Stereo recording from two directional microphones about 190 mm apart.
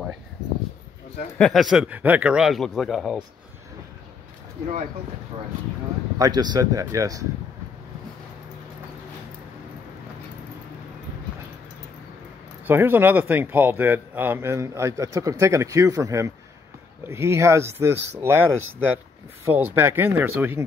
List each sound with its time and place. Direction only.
1.4 s a man's voice: centre (ahead or behind)
6.1 s speech: 20° right (ahead or behind)
12.6 s speech: 10° right (ahead or behind)